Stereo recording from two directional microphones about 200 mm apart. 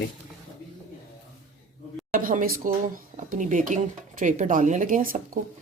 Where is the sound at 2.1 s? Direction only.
45° right (ahead or behind).